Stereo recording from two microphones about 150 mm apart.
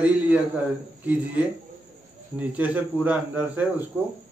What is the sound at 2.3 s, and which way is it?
A man's voice, 10° right (ahead or behind).